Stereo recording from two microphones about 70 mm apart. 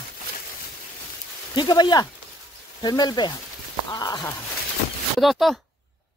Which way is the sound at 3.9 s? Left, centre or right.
Left.